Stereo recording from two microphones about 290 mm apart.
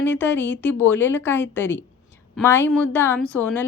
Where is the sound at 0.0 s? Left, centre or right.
Centre.